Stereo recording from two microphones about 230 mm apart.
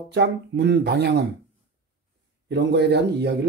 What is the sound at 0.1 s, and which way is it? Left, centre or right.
Speech, right.